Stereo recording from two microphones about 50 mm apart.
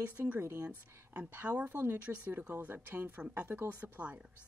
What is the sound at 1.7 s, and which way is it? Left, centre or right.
Speech, right.